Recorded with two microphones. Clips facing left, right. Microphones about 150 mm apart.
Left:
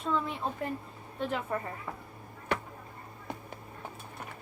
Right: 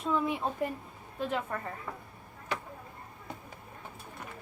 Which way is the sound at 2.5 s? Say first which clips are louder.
Left 4 dB; 60° left (ahead or behind).